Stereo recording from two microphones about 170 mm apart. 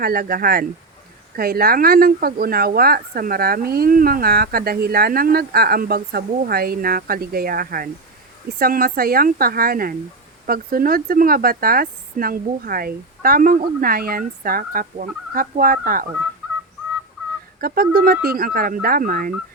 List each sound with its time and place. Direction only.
0.0 s speech: 60° right (ahead or behind)
17.6 s speech: 60° right (ahead or behind)